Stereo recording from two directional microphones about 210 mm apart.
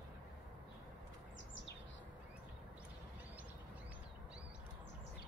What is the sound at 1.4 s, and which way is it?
Chirp, 60° left (ahead or behind).